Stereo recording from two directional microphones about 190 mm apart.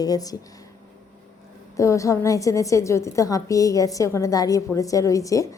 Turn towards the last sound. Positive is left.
turn(degrees=15)  # may be behind; listen again after turning